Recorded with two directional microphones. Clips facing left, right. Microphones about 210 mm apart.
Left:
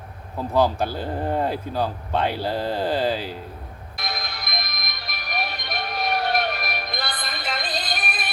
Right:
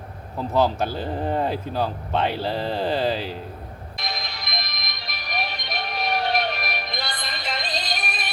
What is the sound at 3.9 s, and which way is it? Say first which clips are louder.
Music: left 1 dB; 5° left (ahead or behind).